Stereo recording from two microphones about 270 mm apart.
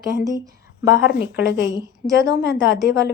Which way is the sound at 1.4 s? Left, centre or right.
Centre.